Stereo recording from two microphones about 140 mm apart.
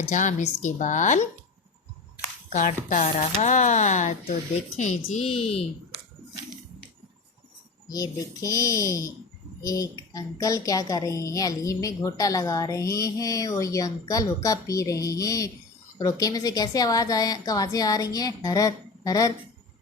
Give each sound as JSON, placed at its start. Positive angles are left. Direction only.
{"t": 0.1, "sound": "a woman's voice", "side_deg": 60}
{"t": 2.5, "sound": "a woman's voice", "side_deg": 60}
{"t": 5.2, "sound": "speech", "side_deg": 45}
{"t": 7.9, "sound": "a woman's voice", "side_deg": 25}